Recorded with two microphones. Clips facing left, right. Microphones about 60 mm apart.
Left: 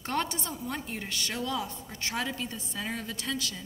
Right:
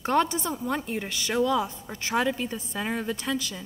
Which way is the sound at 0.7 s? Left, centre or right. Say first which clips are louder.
Right 6 dB; right.